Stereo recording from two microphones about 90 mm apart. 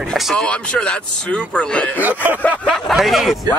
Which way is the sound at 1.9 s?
20° right (ahead or behind).